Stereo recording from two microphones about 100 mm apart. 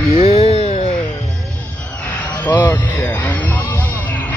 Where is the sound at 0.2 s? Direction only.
80° left.